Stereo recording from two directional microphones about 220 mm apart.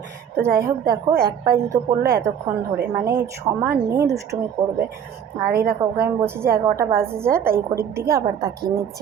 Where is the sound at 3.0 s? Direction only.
15° right (ahead or behind).